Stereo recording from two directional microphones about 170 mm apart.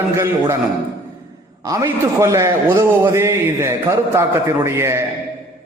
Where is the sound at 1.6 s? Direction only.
20° right (ahead or behind).